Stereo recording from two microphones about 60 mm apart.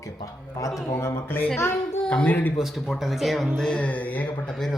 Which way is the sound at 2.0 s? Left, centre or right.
Left.